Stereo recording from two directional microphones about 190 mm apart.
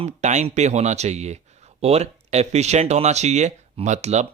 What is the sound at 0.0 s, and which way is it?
Speech, 35° right (ahead or behind).